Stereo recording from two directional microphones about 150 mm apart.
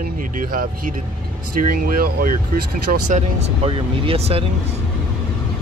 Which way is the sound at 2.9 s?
55° right (ahead or behind).